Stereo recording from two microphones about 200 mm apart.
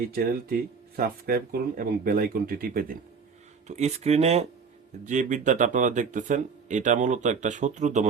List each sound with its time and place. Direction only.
0.1 s speech: 45° right (ahead or behind)
3.7 s speech: 35° right (ahead or behind)